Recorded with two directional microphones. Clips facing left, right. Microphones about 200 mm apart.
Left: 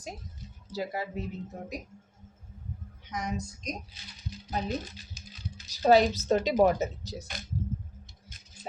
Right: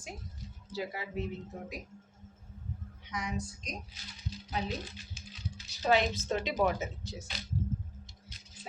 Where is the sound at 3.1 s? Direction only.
45° left (ahead or behind).